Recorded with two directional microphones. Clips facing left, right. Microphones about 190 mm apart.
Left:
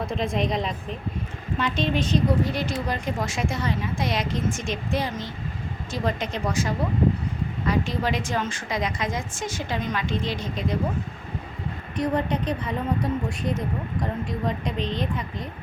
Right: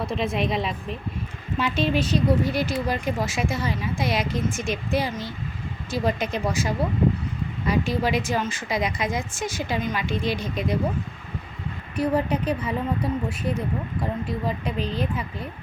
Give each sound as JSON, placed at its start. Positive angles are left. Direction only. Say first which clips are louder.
{"t": 0.0, "sound": "a woman's voice", "louder": "right 1 dB", "side_deg": -5}
{"t": 11.9, "sound": "a woman's voice", "louder": "right 2 dB", "side_deg": -10}